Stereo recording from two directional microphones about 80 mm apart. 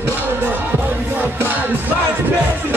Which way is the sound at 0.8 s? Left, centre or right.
Right.